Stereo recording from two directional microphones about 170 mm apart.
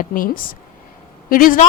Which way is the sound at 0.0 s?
55° left (ahead or behind).